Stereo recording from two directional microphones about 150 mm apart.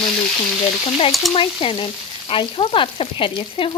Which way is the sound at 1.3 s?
40° left (ahead or behind).